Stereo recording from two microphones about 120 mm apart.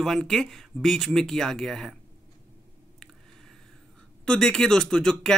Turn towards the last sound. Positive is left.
turn(degrees=5)  # may be behind; listen again after turning